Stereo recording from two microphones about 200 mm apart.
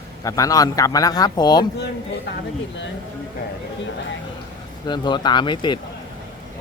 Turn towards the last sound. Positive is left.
turn(degrees=25)  # may be behind; listen again after turning